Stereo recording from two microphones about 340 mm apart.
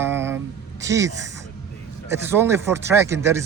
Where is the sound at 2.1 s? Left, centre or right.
Centre.